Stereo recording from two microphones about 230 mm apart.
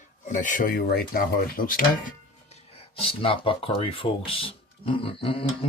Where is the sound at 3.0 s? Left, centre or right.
Left.